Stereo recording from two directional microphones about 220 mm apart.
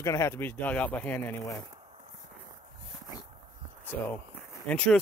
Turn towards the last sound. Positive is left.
turn(degrees=5)  # may be behind; listen again after turning